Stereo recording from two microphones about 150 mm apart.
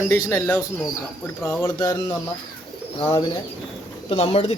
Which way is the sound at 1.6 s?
25° left (ahead or behind).